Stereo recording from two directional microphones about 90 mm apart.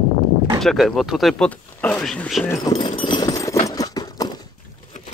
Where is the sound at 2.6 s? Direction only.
55° left (ahead or behind).